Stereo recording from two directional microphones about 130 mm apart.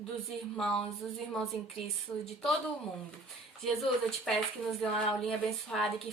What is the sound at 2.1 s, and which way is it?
Speech, 15° left (ahead or behind).